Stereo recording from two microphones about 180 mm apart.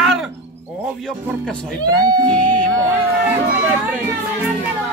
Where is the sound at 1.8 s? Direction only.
20° right (ahead or behind).